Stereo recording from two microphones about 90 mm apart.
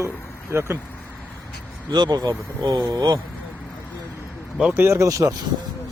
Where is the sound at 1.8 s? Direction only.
55° right (ahead or behind).